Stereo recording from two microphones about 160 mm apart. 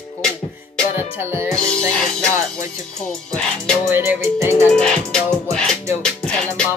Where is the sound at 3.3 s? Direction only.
5° left (ahead or behind).